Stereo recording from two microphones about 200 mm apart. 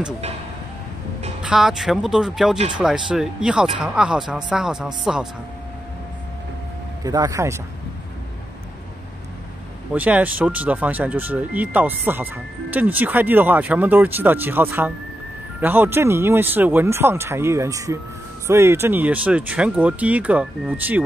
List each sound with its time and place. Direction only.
1.4 s speech: 5° right (ahead or behind)
7.1 s speech: 15° right (ahead or behind)
9.9 s speech: 10° right (ahead or behind)